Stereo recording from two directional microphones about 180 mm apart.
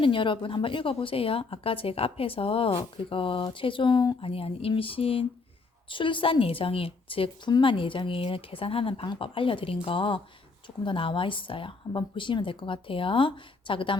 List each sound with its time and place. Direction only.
0.0 s a woman's voice: 30° left (ahead or behind)